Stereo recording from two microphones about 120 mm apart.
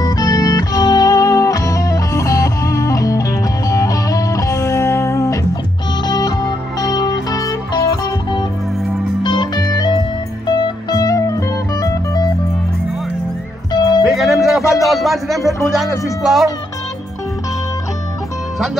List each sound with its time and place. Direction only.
0.0 s music: 30° left (ahead or behind)
9.2 s music: 40° left (ahead or behind)
13.7 s music: 35° left (ahead or behind)
14.0 s music: centre (ahead or behind)
16.2 s speech: centre (ahead or behind)